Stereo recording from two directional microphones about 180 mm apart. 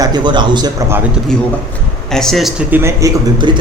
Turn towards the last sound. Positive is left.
turn(degrees=-20)  # may be behind; listen again after turning